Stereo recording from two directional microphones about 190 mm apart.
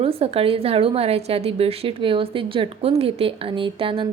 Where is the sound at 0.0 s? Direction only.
30° right (ahead or behind).